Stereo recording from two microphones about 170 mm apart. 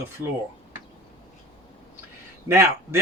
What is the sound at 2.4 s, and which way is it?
Speech, 15° right (ahead or behind).